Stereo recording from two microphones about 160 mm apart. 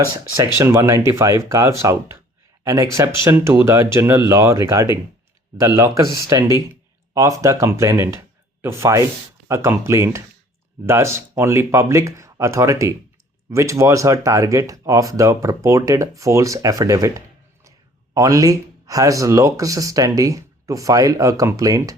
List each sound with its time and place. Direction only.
0.5 s speech: 15° right (ahead or behind)